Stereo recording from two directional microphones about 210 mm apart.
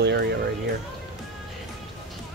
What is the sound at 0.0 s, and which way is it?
Speech, 55° right (ahead or behind).